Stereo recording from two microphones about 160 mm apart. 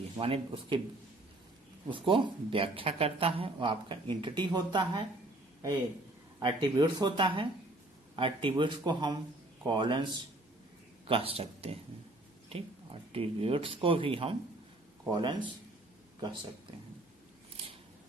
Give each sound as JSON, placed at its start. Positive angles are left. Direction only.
{"t": 0.2, "sound": "speech", "side_deg": -35}
{"t": 1.9, "sound": "speech", "side_deg": -30}
{"t": 6.4, "sound": "speech", "side_deg": -30}